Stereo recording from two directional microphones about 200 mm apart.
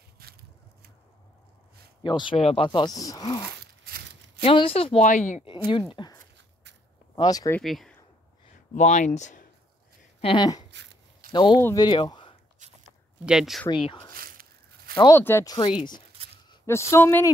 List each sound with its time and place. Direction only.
0.2 s a sound: 50° right (ahead or behind)
2.0 s speech: 25° left (ahead or behind); by 5.5 s 40° left (ahead or behind)
5.7 s speech: 25° left (ahead or behind)
7.6 s speech: centre (ahead or behind)
8.7 s speech: 35° left (ahead or behind)
10.2 s speech: 20° left (ahead or behind)
10.7 s a sound: 55° right (ahead or behind)
11.3 s speech: 20° left (ahead or behind)
13.2 s speech: 5° right (ahead or behind)
13.8 s speech: 20° left (ahead or behind)
14.1 s a sound: 45° right (ahead or behind)
15.0 s speech: 15° left (ahead or behind)
16.9 s speech: 10° left (ahead or behind)